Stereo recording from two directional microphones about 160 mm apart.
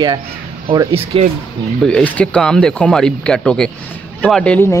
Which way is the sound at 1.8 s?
10° left (ahead or behind).